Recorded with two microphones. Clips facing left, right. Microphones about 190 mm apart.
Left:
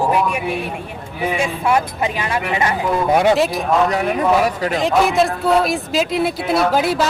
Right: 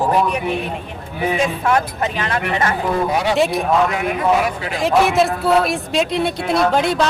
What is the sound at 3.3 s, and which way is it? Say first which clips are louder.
Speech: right 1 dB; centre (ahead or behind).